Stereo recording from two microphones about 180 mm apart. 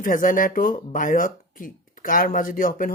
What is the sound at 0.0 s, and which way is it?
Speech, 50° left (ahead or behind).